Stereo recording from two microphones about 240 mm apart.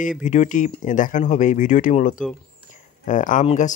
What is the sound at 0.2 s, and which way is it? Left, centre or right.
Speech, left.